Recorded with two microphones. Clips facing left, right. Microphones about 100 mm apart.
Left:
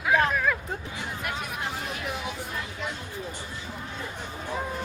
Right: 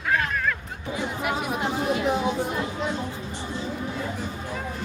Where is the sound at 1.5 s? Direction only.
25° right (ahead or behind).